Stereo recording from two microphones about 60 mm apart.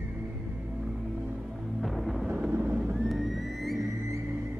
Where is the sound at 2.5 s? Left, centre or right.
Right.